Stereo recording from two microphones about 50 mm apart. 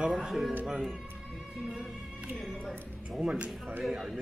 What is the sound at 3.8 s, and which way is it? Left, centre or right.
Speech, centre.